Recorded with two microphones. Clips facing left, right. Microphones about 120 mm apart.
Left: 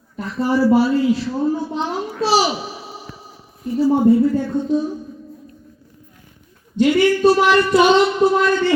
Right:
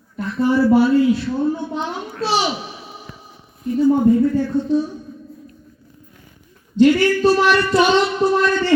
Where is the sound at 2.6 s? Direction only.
5° left (ahead or behind).